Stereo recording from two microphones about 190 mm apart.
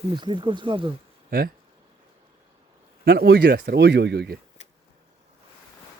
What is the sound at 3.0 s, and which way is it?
Speech, 55° right (ahead or behind).